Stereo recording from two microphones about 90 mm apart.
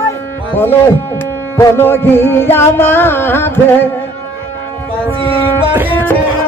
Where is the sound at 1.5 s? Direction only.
25° left (ahead or behind).